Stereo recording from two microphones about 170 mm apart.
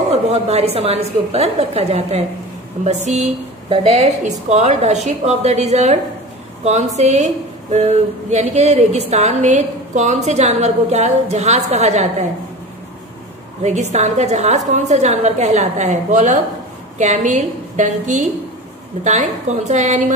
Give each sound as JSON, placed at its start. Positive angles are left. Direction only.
{"t": 0.1, "sound": "a woman's voice", "side_deg": -40}
{"t": 13.6, "sound": "a woman's voice", "side_deg": -40}